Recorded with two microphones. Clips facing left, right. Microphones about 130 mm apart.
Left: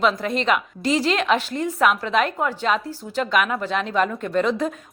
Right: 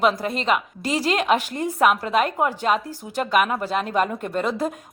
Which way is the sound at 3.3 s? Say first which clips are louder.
Right 2 dB; 40° right (ahead or behind).